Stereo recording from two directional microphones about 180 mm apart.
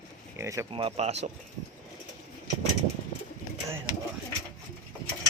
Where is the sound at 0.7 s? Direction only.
30° right (ahead or behind).